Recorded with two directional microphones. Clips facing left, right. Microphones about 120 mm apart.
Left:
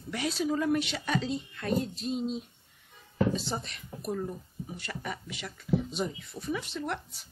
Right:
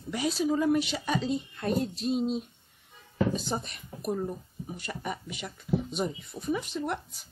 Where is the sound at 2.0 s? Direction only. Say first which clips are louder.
Right 4 dB; 70° right (ahead or behind).